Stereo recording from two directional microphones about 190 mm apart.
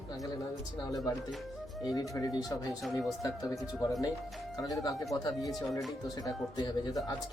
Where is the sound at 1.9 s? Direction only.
20° left (ahead or behind).